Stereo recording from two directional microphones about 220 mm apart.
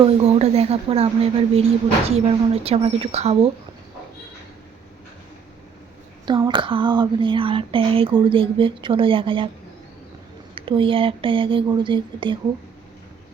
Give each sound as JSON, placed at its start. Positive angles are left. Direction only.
{"t": 0.0, "sound": "speech", "side_deg": -30}
{"t": 6.2, "sound": "speech", "side_deg": -20}
{"t": 10.5, "sound": "speech", "side_deg": -25}